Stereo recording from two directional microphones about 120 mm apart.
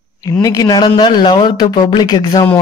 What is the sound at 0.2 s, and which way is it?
A man's voice, 30° left (ahead or behind).